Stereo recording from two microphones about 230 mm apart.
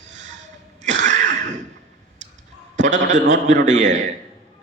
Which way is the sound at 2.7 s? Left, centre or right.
Right.